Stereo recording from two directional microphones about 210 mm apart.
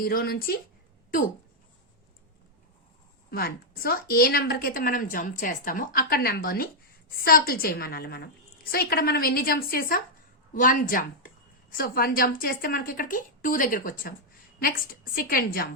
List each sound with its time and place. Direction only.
0.0 s a woman's voice: 45° left (ahead or behind)
3.2 s a woman's voice: 45° left (ahead or behind)